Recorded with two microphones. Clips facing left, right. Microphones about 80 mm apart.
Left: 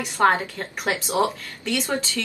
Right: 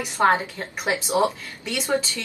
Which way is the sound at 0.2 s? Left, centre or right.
Centre.